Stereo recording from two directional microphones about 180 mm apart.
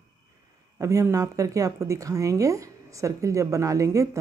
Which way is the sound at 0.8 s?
20° right (ahead or behind).